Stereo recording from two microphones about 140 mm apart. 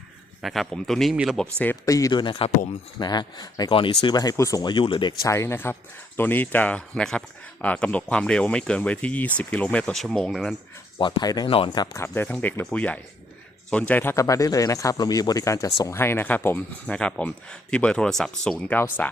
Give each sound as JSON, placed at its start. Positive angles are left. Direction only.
{"t": 0.4, "sound": "speech", "side_deg": 0}
{"t": 1.4, "sound": "speech", "side_deg": 10}
{"t": 1.8, "sound": "speech", "side_deg": 25}
{"t": 2.2, "sound": "speech", "side_deg": 35}
{"t": 5.2, "sound": "speech", "side_deg": 20}
{"t": 10.9, "sound": "speech", "side_deg": 25}
{"t": 11.4, "sound": "speech", "side_deg": 40}
{"t": 12.0, "sound": "speech", "side_deg": 15}